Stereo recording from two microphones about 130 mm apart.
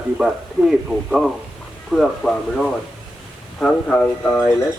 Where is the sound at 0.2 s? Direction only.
5° right (ahead or behind).